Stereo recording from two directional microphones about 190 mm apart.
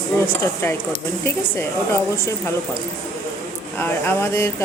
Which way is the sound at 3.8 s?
10° left (ahead or behind).